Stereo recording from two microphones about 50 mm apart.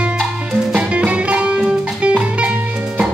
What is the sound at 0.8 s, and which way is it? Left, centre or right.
Music, right.